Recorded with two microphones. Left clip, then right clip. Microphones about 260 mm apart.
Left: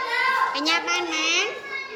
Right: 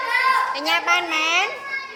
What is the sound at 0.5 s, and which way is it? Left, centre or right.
Speech, centre.